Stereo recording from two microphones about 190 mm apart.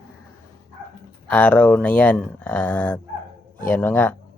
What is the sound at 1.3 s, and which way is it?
Speech, 10° left (ahead or behind).